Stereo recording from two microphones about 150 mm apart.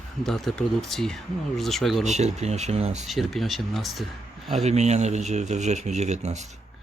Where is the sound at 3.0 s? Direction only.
Centre (ahead or behind).